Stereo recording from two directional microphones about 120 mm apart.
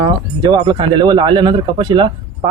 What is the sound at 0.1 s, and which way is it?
Speech, 40° right (ahead or behind).